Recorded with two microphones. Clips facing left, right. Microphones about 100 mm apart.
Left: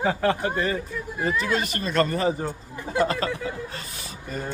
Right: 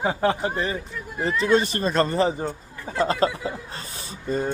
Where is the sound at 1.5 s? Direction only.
30° right (ahead or behind).